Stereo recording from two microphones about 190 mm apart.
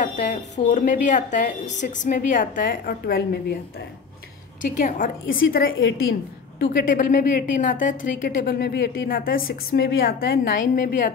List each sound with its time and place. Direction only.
0.0 s a woman's voice: 40° left (ahead or behind)
4.6 s a woman's voice: 45° left (ahead or behind)
5.2 s a woman's voice: 90° left
6.6 s a woman's voice: 45° left (ahead or behind)